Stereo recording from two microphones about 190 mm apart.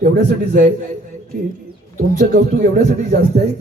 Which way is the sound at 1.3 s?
50° right (ahead or behind).